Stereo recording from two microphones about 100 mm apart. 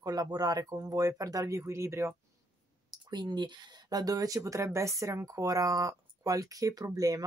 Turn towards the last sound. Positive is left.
turn(degrees=-40)  # may be behind; listen again after turning